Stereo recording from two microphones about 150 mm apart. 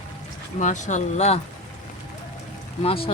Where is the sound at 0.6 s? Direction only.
55° left (ahead or behind).